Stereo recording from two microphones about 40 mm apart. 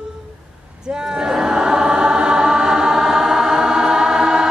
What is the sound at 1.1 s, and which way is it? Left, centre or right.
Choir, centre.